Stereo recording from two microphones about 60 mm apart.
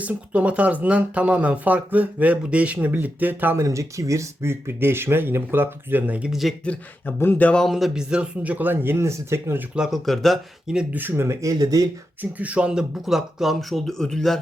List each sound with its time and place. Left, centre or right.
0.0 s speech: right
3.5 s speech: right
7.0 s speech: left
7.7 s speech: centre
7.9 s speech: centre
8.4 s speech: right
9.9 s speech: centre
10.7 s speech: centre
11.1 s speech: right
12.2 s speech: right; by 14.3 s centre